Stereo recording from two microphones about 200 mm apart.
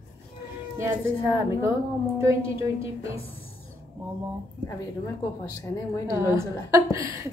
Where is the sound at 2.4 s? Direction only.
30° left (ahead or behind).